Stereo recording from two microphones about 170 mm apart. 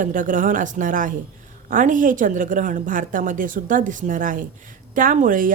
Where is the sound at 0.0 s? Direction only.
50° right (ahead or behind).